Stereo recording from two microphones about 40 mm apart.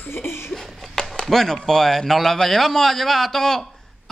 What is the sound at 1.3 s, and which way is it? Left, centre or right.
A man's voice, centre.